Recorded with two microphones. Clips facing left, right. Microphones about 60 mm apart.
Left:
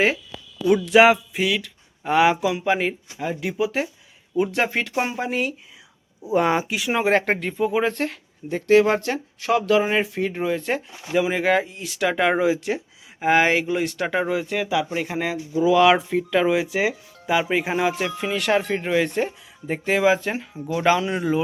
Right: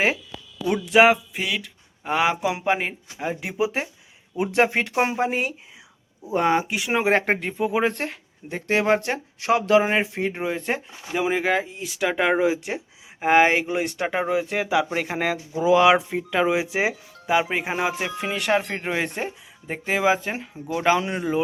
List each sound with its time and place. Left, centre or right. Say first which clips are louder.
0.6 s speech: left 2 dB; centre
2.6 s speech: left 2 dB; centre; by 5.5 s right
6.2 s speech: left 1 dB; centre
6.9 s speech: even; centre
11.1 s speech: left 2 dB; centre
14.5 s speech: right 1 dB; right
15.8 s speech: left 1 dB; centre
18.9 s speech: left 6 dB; right
19.1 s speech: left 5 dB; centre